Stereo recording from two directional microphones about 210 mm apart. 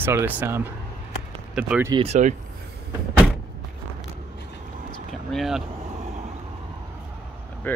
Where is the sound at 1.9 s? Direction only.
30° right (ahead or behind).